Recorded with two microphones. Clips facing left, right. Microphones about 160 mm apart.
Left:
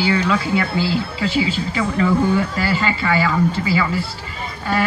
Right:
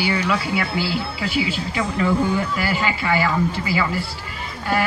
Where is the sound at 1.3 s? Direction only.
10° right (ahead or behind).